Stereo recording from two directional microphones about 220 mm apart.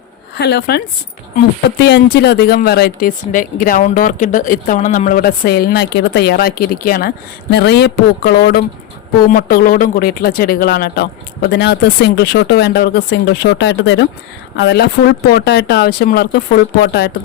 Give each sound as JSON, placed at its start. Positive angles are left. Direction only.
{"t": 0.3, "sound": "speech", "side_deg": 45}
{"t": 1.8, "sound": "speech", "side_deg": 45}